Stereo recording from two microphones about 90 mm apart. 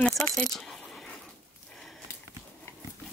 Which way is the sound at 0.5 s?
5° left (ahead or behind).